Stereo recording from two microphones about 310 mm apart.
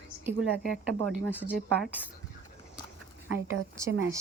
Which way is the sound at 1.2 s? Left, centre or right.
Centre.